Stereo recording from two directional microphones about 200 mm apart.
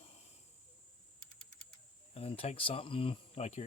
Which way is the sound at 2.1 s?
30° left (ahead or behind).